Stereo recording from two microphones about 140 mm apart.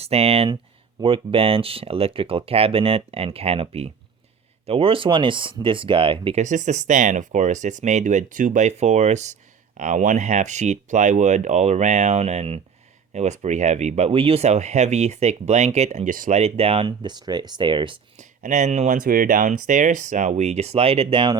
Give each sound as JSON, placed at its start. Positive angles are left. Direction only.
{"t": 0.0, "sound": "speech", "side_deg": -45}
{"t": 6.4, "sound": "speech", "side_deg": -60}
{"t": 16.4, "sound": "speech", "side_deg": -45}
{"t": 18.2, "sound": "speech", "side_deg": -60}